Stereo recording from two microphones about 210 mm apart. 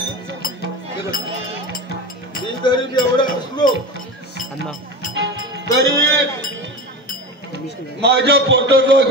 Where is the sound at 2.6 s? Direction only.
20° left (ahead or behind).